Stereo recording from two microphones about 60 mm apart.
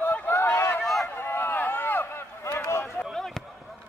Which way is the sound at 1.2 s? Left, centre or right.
Left.